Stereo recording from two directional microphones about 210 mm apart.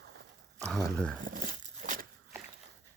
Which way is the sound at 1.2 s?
40° right (ahead or behind).